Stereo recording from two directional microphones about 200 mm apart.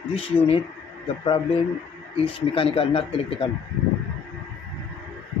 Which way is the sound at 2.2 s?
30° left (ahead or behind).